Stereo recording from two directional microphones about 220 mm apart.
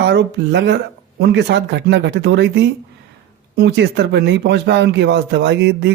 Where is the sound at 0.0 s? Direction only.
50° right (ahead or behind).